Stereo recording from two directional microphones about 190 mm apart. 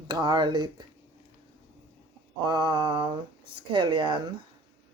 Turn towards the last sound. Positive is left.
turn(degrees=-25)  # may be behind; listen again after turning